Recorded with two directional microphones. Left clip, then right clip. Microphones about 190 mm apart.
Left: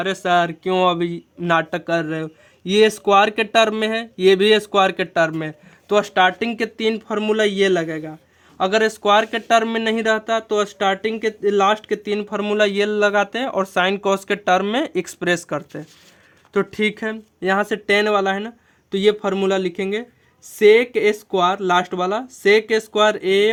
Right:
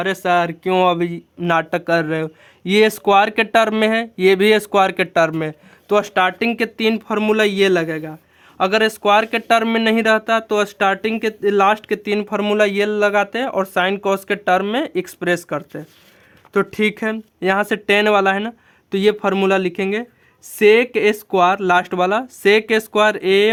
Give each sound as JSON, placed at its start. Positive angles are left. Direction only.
{"t": 0.0, "sound": "speech", "side_deg": -25}
{"t": 16.5, "sound": "speech", "side_deg": -20}